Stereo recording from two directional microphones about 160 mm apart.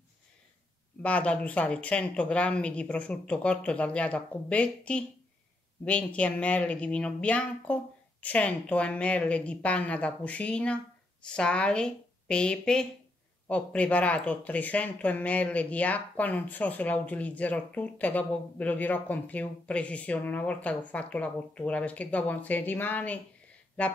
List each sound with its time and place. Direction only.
1.0 s a woman's voice: 10° left (ahead or behind)